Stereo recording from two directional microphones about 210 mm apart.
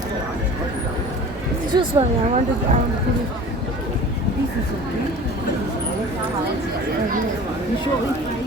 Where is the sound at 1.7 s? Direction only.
25° right (ahead or behind).